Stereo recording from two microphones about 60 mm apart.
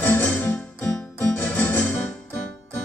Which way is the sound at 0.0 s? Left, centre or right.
Left.